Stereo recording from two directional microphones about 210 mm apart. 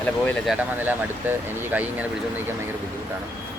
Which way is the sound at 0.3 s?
5° right (ahead or behind).